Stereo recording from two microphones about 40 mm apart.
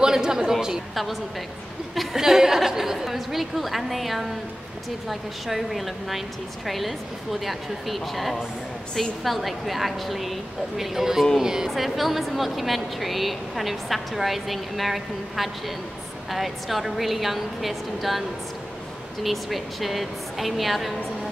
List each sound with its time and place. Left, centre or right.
0.0 s speech: centre
2.1 s a woman's voice: centre
11.8 s a woman's voice: centre
19.2 s a woman's voice: centre